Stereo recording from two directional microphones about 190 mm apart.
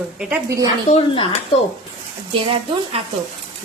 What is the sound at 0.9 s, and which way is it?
Speech, 30° left (ahead or behind).